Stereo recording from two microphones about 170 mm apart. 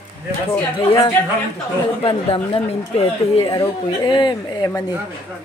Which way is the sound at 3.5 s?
25° left (ahead or behind).